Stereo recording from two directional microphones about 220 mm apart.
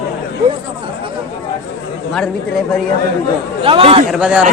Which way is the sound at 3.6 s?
25° right (ahead or behind).